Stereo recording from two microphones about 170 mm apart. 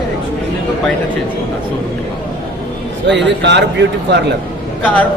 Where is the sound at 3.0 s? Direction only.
90° right.